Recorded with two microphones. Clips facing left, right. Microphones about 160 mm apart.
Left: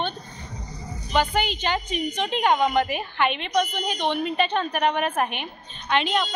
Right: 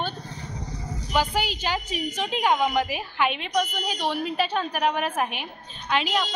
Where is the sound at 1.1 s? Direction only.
5° right (ahead or behind).